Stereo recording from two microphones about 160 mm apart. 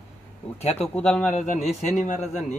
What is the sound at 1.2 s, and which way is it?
A man's voice, 50° left (ahead or behind).